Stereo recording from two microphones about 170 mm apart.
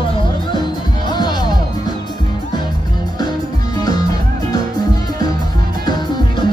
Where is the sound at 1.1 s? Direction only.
25° left (ahead or behind).